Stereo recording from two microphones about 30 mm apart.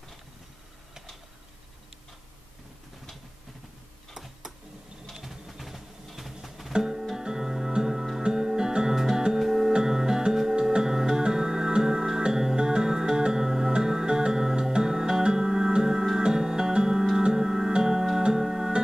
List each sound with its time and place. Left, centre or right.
4.1 s tick-tock: centre
5.1 s a sound: centre
5.5 s music: centre
9.7 s music: right